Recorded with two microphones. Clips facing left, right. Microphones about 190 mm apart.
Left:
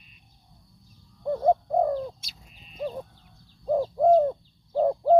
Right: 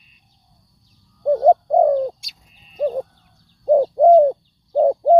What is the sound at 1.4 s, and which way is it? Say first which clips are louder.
Bird: right 8 dB; 55° right (ahead or behind).